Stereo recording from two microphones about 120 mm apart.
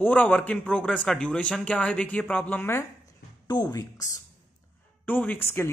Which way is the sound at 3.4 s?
35° left (ahead or behind).